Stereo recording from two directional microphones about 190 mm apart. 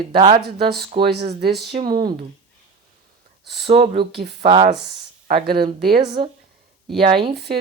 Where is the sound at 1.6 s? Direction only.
25° right (ahead or behind).